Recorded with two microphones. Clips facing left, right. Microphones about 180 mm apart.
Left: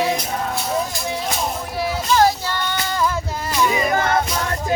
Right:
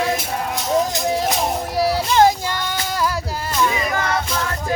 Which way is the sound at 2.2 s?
15° right (ahead or behind).